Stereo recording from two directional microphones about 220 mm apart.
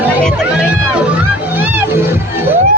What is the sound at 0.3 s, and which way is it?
Music, centre (ahead or behind).